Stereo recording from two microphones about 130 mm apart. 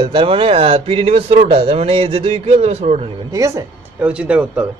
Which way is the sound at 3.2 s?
25° right (ahead or behind).